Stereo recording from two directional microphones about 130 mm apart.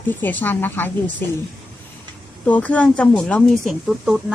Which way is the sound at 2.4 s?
10° left (ahead or behind).